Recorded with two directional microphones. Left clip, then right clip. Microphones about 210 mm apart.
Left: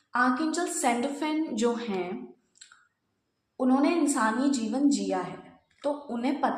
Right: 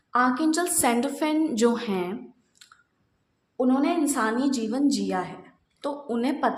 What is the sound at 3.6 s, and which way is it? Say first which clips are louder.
A woman's voice: right 1 dB; 40° right (ahead or behind).